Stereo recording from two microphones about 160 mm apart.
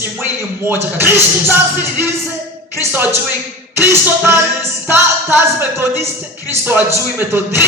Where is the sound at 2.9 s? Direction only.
15° right (ahead or behind).